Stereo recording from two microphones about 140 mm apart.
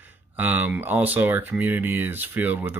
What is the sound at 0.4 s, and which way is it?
Speech, 10° right (ahead or behind).